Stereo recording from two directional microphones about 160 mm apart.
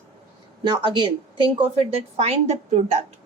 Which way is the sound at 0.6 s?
30° right (ahead or behind).